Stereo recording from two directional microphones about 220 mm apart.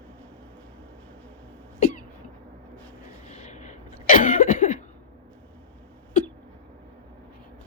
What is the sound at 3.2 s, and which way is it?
Cough, 30° left (ahead or behind).